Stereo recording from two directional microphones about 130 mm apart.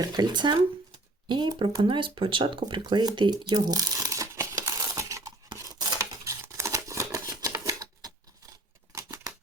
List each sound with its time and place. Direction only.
0.0 s speech: 30° right (ahead or behind)
5.5 s scissors: 25° right (ahead or behind)